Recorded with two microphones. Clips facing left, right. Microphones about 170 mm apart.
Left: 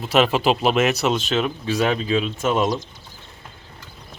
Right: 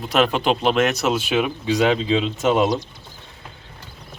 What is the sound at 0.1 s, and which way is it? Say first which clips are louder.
Speech: left 1 dB; 5° left (ahead or behind).